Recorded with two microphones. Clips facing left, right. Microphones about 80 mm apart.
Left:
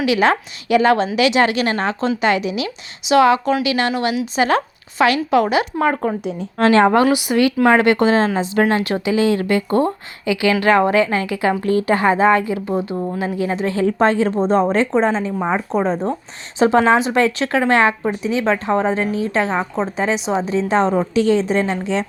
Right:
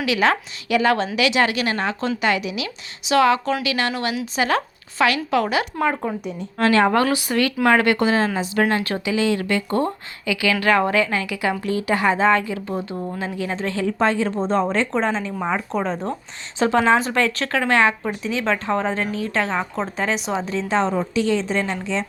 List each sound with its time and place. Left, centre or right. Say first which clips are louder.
0.0 s a woman's voice: left 4 dB; left
7.0 s speech: left 5 dB; centre
7.7 s a woman's voice: left 2 dB; left
13.8 s a woman's voice: left 4 dB; left
16.6 s a woman's voice: left 4 dB; left
20.7 s a woman's voice: left 3 dB; left
21.2 s speech: left 5 dB; left